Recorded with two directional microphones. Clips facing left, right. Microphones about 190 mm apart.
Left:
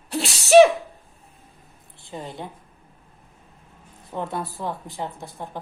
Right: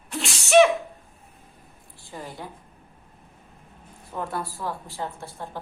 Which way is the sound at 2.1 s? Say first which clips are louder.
Left 3 dB; 25° left (ahead or behind).